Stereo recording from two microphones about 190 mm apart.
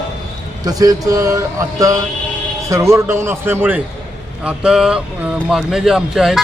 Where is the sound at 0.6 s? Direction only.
20° right (ahead or behind).